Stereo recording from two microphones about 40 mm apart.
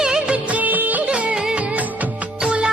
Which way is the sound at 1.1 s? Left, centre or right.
Right.